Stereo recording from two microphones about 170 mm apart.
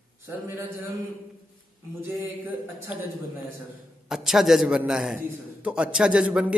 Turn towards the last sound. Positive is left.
turn(degrees=-5)  # may be behind; listen again after turning